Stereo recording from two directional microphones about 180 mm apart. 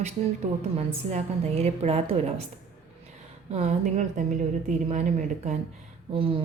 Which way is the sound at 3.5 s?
40° right (ahead or behind).